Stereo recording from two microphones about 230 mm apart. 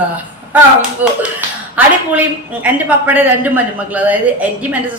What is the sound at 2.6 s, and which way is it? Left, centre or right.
Speech, centre.